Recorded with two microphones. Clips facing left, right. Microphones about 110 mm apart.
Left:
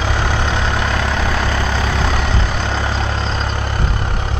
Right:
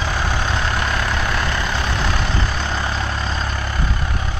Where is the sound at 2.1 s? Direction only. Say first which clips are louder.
Left 3 dB; 75° left (ahead or behind).